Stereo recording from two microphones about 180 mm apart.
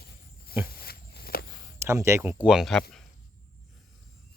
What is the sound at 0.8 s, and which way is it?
Walk, 60° left (ahead or behind).